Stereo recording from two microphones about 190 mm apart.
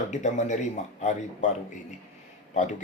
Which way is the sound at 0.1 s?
40° left (ahead or behind).